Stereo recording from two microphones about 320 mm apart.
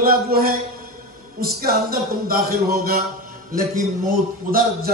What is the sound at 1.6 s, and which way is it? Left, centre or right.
A man's voice, right.